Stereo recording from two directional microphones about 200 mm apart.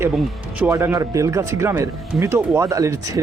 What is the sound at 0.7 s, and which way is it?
Speech, 15° right (ahead or behind).